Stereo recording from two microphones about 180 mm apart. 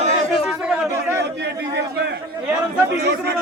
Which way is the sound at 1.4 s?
70° right (ahead or behind).